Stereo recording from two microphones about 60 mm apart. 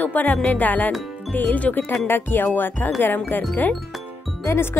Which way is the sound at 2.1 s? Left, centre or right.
Left.